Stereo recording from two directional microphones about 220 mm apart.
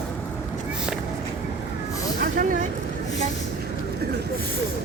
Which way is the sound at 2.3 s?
35° right (ahead or behind).